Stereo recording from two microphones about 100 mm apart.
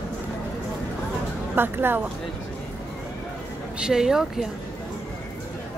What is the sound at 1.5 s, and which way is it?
Speech, 20° right (ahead or behind).